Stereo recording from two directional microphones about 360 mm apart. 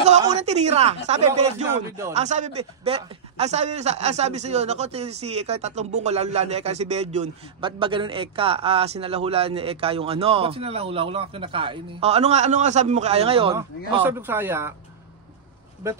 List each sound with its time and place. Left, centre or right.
0.0 s speech: centre
2.2 s speech: centre
15.8 s speech: centre